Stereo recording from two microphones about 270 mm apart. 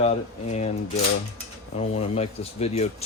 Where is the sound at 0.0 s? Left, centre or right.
Left.